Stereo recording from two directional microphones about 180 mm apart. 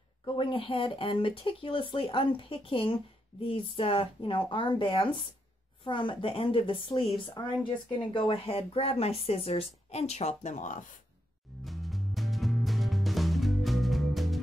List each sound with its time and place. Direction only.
0.2 s speech: 30° left (ahead or behind); by 10.9 s 45° left (ahead or behind)
11.6 s music: centre (ahead or behind)